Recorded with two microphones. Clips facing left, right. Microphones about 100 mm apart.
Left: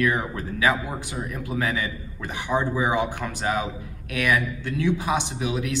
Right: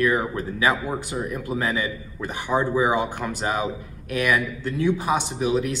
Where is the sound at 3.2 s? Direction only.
5° right (ahead or behind).